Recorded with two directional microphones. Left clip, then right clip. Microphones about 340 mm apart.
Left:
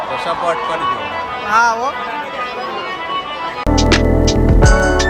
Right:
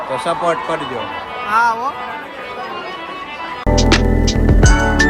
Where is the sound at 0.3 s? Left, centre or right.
Centre.